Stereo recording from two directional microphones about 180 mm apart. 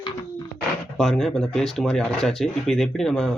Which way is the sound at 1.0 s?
Centre (ahead or behind).